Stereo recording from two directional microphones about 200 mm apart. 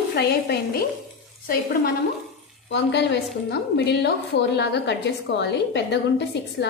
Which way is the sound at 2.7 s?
60° left (ahead or behind).